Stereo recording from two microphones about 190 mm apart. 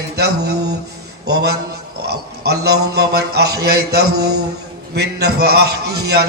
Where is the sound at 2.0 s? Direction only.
60° right (ahead or behind).